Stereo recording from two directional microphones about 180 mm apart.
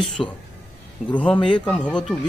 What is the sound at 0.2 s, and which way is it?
A man's voice, centre (ahead or behind).